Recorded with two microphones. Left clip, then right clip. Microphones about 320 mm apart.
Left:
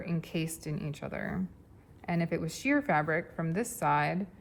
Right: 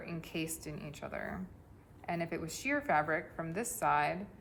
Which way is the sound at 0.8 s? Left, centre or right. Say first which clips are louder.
Left 3 dB; left.